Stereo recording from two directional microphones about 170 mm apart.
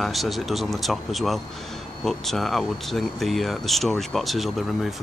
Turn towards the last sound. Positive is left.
turn(degrees=0)  # may be behind; listen again after turning